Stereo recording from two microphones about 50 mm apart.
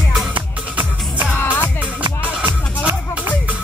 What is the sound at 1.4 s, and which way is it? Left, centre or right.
Music, left.